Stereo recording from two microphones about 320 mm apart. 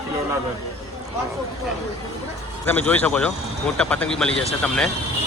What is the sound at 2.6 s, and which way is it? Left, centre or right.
Speech, centre.